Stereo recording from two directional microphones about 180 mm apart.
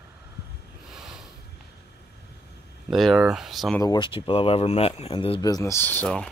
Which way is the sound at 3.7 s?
20° left (ahead or behind).